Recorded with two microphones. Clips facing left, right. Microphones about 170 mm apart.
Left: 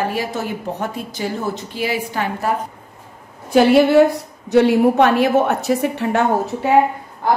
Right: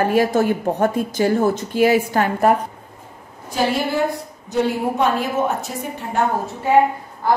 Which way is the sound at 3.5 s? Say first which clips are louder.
Left 9 dB; 70° left (ahead or behind).